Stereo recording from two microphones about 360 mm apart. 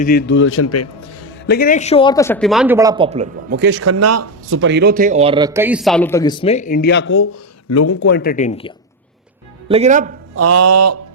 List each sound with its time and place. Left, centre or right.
0.0 s a man's voice: left
1.5 s speech: left; by 3.6 s centre
3.6 s speech: right; by 7.9 s left
7.9 s speech: left
9.6 s speech: centre
10.3 s a sound: right